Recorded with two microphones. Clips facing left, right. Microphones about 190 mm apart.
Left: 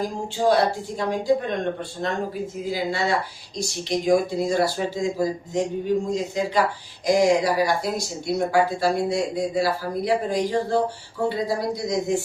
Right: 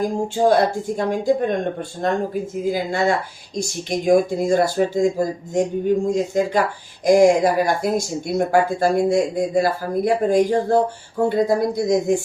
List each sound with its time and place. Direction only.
0.0 s speech: 50° right (ahead or behind)